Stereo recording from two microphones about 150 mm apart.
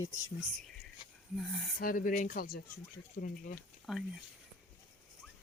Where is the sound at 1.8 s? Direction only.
70° left (ahead or behind).